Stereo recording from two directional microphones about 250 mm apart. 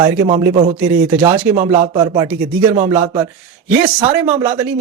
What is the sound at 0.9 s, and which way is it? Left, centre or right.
Speech, centre.